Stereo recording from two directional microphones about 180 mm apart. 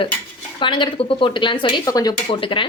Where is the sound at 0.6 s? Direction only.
25° left (ahead or behind).